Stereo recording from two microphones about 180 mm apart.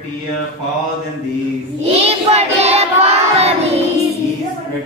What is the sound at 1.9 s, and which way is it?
Child singing, 35° right (ahead or behind).